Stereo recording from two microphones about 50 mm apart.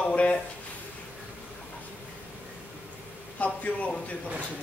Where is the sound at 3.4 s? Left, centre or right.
Left.